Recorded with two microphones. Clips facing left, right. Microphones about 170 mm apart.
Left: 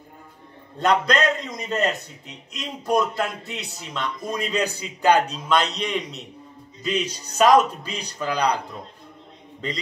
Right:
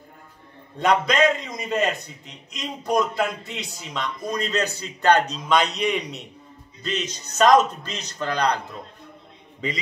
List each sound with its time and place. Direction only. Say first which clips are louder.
0.7 s a man's voice: right 1 dB; centre (ahead or behind)
6.8 s speech: left 3 dB; 10° left (ahead or behind)